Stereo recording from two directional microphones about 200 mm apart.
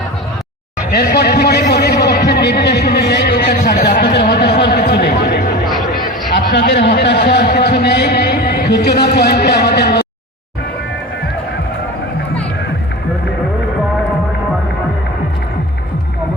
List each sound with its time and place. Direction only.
0.9 s a sound: 50° left (ahead or behind)
5.6 s chatter: centre (ahead or behind)
6.3 s a man's voice: 60° left (ahead or behind)